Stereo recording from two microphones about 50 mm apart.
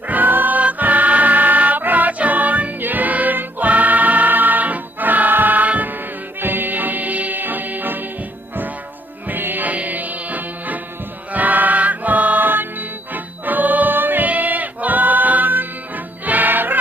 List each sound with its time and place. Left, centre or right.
0.1 s music: right
9.2 s music: right